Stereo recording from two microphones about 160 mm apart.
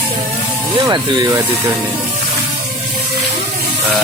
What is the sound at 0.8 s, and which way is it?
Speech, 25° right (ahead or behind).